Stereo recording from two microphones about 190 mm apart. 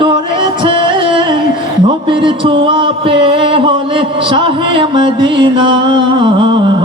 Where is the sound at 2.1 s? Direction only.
25° right (ahead or behind).